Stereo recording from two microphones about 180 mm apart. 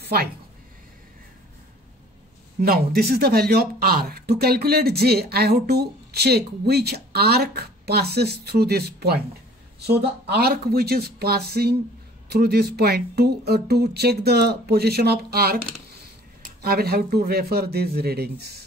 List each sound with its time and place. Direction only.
0.0 s speech: 60° right (ahead or behind)
2.6 s speech: 60° right (ahead or behind)
16.6 s speech: 60° right (ahead or behind)